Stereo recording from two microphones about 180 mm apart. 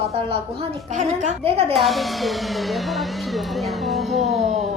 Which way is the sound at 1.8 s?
Centre (ahead or behind).